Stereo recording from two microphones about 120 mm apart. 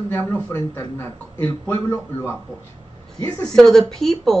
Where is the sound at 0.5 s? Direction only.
25° left (ahead or behind).